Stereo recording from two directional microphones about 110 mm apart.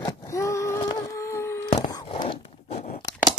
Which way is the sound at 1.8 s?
35° left (ahead or behind).